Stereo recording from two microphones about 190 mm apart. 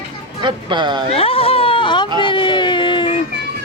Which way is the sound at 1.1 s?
30° left (ahead or behind).